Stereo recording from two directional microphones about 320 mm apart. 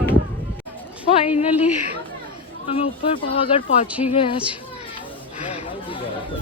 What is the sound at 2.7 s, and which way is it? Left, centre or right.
Speech, centre.